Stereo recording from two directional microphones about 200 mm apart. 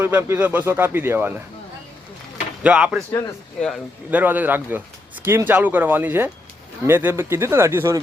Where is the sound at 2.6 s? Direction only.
5° right (ahead or behind).